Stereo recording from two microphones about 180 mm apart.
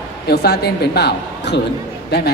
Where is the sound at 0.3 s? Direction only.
65° left (ahead or behind).